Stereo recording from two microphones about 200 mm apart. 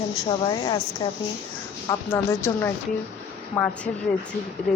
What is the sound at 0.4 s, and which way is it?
Speech, 20° left (ahead or behind).